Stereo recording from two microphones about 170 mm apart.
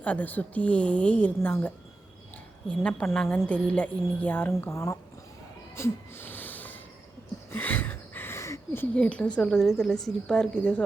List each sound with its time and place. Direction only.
0.0 s a woman's voice: 10° left (ahead or behind)
5.7 s wheeze: 15° left (ahead or behind)
7.5 s speech: 10° left (ahead or behind)